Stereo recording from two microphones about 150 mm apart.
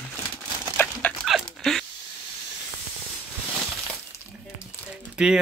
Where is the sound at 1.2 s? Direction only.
Centre (ahead or behind).